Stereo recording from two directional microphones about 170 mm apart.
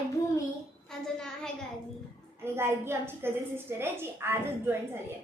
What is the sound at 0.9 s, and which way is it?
Speech, 5° left (ahead or behind).